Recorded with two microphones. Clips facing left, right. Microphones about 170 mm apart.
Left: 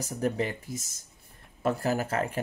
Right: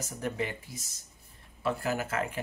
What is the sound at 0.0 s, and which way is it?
Speech, 35° left (ahead or behind).